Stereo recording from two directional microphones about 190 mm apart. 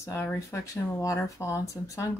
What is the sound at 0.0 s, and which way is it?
Speech, 10° left (ahead or behind).